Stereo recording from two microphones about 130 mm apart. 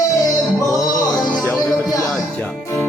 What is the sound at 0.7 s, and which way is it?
Music, 25° left (ahead or behind).